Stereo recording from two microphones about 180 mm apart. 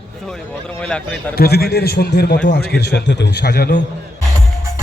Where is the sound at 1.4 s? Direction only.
60° left (ahead or behind).